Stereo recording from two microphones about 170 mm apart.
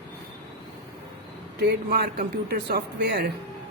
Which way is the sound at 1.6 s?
70° right (ahead or behind).